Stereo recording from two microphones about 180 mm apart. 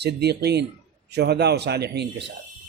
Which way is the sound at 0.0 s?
65° right (ahead or behind).